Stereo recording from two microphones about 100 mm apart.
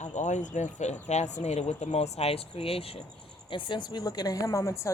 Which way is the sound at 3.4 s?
55° left (ahead or behind).